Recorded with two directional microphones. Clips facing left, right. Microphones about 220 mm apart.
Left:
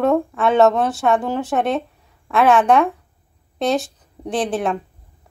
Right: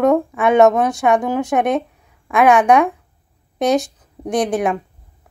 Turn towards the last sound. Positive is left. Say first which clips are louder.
# right 3 dB
turn(degrees=-15)  # may be behind; listen again after turning